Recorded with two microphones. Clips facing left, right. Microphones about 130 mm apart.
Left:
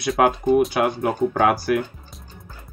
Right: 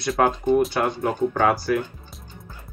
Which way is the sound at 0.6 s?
Centre (ahead or behind).